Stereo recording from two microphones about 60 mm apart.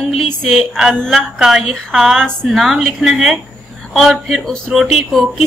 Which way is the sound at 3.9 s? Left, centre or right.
Centre.